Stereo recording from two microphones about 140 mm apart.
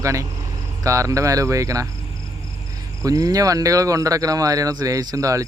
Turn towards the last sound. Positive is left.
turn(degrees=-25)  # may be behind; listen again after turning